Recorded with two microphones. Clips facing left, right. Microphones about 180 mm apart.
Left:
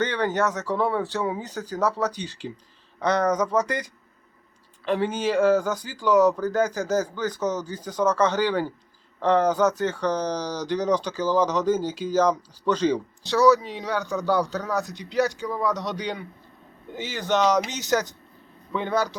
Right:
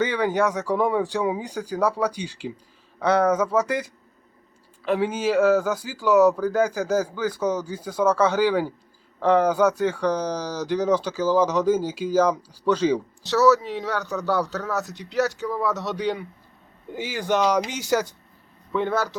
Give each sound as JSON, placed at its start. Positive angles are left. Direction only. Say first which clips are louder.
{"t": 0.0, "sound": "a man's voice", "louder": "right 2 dB", "side_deg": -10}